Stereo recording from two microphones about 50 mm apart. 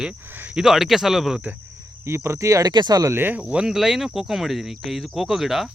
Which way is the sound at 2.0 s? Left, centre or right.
Right.